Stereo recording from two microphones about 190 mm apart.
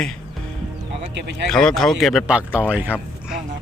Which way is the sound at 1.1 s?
65° right (ahead or behind).